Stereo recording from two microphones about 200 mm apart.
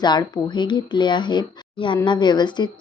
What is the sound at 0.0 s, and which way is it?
Speech, 20° left (ahead or behind).